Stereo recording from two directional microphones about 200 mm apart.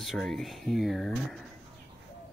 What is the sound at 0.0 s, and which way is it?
Speech, centre (ahead or behind).